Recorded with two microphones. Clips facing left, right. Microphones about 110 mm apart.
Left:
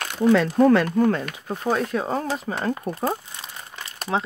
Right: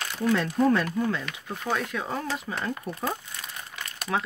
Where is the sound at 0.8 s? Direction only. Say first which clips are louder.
Left 7 dB; 55° left (ahead or behind); by 3.2 s 35° left (ahead or behind).